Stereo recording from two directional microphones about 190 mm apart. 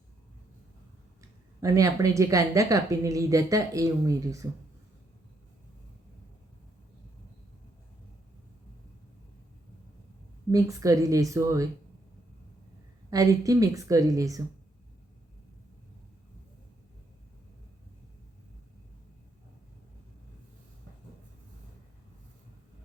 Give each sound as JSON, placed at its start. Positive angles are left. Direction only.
{"t": 1.2, "sound": "speech", "side_deg": -15}
{"t": 10.5, "sound": "speech", "side_deg": -15}
{"t": 13.1, "sound": "speech", "side_deg": -20}